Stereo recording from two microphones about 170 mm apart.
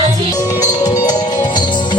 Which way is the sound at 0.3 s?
20° left (ahead or behind).